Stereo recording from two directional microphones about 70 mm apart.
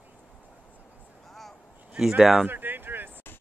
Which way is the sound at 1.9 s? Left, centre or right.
Centre.